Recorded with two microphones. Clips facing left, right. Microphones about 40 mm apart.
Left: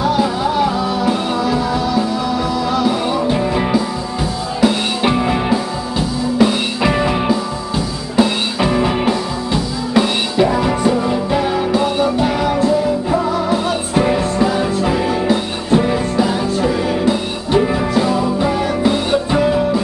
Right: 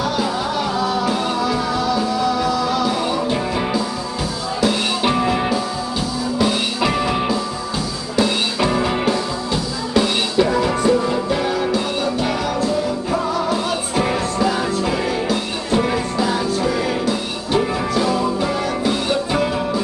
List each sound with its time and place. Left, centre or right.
0.0 s music: centre
3.3 s music: centre
4.6 s music: centre
6.9 s music: centre
13.1 s music: centre